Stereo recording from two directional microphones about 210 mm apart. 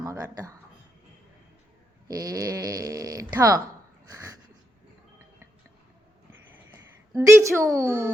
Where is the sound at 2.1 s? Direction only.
15° right (ahead or behind).